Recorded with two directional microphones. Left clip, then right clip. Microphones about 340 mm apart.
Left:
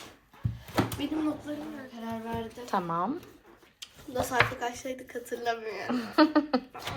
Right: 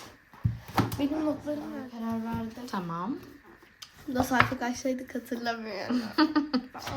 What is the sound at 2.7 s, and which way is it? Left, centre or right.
Speech, centre.